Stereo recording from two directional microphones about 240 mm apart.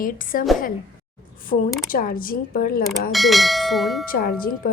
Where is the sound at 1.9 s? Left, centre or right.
Left.